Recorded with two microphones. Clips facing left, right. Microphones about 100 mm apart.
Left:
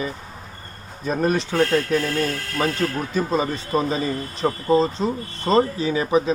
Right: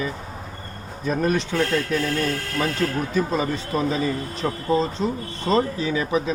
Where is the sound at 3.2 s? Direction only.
25° left (ahead or behind).